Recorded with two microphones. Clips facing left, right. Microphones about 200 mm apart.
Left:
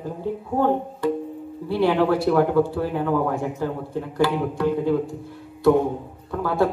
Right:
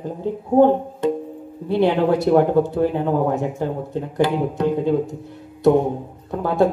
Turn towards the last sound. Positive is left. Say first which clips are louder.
# right 3 dB
turn(degrees=-20)  # may be behind; listen again after turning